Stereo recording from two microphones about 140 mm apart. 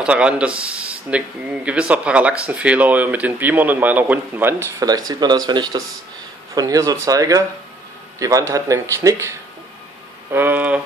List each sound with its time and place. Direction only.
0.0 s a man's voice: 10° right (ahead or behind)
10.3 s speech: 15° right (ahead or behind)